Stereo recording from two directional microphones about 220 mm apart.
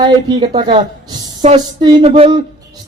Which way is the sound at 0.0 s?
20° right (ahead or behind).